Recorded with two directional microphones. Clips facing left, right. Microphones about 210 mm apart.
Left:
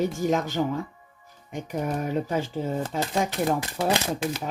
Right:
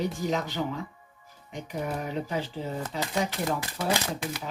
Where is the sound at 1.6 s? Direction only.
45° left (ahead or behind).